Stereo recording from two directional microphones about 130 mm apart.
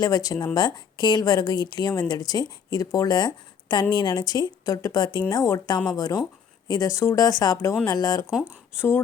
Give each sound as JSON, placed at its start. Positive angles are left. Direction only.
{"t": 0.0, "sound": "a woman's voice", "side_deg": 30}